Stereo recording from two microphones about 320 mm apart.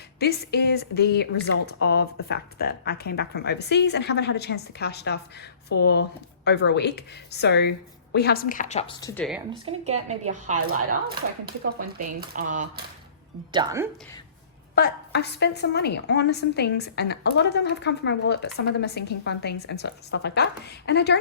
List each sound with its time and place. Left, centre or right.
0.2 s a woman's voice: left; by 9.2 s centre
9.5 s speech: centre
13.5 s speech: centre
14.8 s a woman's voice: left